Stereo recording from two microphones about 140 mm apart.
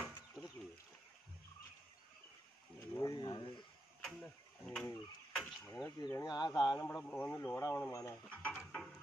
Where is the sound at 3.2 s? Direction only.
35° left (ahead or behind).